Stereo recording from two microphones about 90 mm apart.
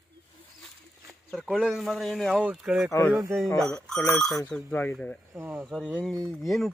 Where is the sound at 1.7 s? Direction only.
Centre (ahead or behind).